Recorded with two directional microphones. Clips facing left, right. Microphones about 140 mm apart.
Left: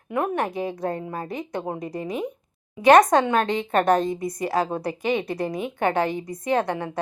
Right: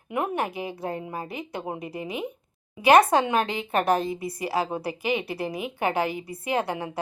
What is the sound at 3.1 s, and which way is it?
A woman's voice, 5° right (ahead or behind).